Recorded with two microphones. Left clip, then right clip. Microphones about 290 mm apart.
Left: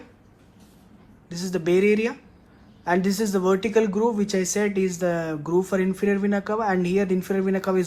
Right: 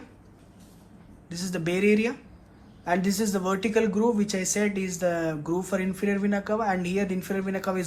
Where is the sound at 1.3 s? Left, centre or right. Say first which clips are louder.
Left 6 dB; left.